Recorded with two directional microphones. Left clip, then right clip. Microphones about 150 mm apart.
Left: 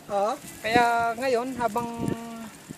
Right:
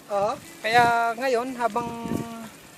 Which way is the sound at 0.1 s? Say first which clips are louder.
Right 1 dB; 50° left (ahead or behind).